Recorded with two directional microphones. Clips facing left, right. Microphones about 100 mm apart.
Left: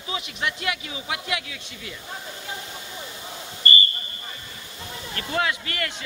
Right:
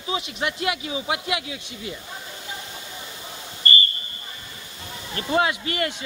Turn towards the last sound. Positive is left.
turn(degrees=-20)  # may be behind; listen again after turning